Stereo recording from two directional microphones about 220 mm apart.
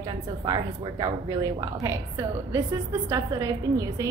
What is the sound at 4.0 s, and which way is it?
Speech, 15° right (ahead or behind).